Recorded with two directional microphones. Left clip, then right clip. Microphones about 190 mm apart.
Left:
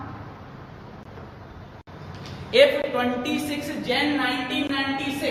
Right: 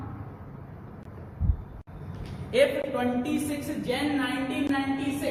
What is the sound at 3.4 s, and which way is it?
Speech, 15° right (ahead or behind).